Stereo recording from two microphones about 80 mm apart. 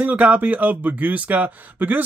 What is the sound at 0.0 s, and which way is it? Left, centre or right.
Speech, centre.